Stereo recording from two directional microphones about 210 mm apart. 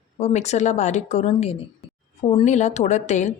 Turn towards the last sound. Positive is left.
turn(degrees=35)  # may be behind; listen again after turning